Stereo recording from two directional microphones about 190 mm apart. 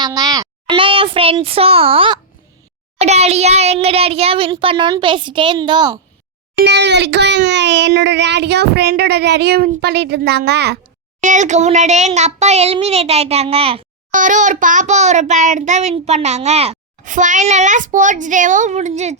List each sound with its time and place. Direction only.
0.0 s a child's voice: 20° right (ahead or behind)
6.7 s speech: 65° right (ahead or behind)
11.2 s a child's voice: 40° right (ahead or behind)
14.1 s a child's voice: 40° right (ahead or behind)